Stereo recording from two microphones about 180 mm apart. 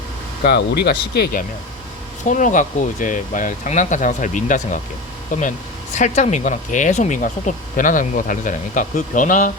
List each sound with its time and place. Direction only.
0.4 s speech: 65° left (ahead or behind)
2.2 s speech: 45° left (ahead or behind)